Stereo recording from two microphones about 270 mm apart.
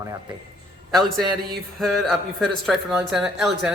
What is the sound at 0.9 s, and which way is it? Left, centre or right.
Speech, centre.